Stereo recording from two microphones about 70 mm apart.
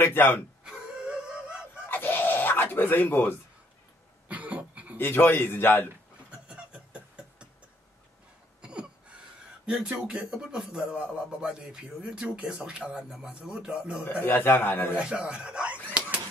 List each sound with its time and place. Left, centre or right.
0.0 s a man's voice: left
0.7 s wail: centre
1.9 s fowl: left
4.3 s cough: right
4.9 s a man's voice: left
6.4 s a sound: centre
8.5 s a sound: centre
9.7 s speech: centre
14.0 s a man's voice: left
15.0 s speech: centre